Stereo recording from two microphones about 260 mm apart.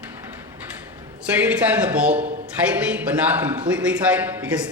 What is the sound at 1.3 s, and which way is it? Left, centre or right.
A man's voice, centre.